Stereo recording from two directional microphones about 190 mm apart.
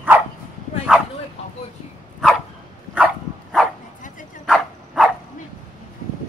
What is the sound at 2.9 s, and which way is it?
Dog, 5° right (ahead or behind).